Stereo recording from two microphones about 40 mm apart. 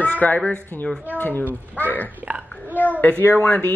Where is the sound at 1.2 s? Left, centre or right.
Left.